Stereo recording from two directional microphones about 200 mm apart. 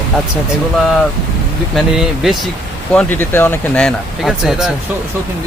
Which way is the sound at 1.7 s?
Centre (ahead or behind).